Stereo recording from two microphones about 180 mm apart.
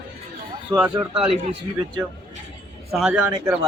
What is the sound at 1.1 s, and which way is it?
Speech, 5° right (ahead or behind).